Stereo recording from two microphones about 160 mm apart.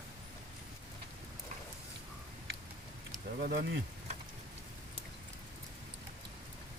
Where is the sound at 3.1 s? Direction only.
65° right (ahead or behind).